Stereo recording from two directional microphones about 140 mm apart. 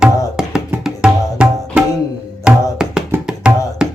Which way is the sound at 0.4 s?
5° right (ahead or behind).